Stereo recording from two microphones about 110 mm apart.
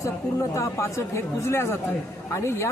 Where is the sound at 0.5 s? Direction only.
25° left (ahead or behind).